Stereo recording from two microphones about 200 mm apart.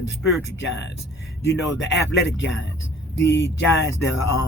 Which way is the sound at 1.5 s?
65° left (ahead or behind).